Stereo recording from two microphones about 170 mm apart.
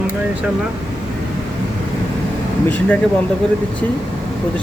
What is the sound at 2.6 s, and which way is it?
Speech, 10° left (ahead or behind).